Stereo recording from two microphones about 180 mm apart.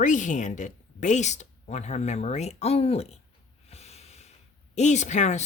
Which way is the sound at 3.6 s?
35° left (ahead or behind).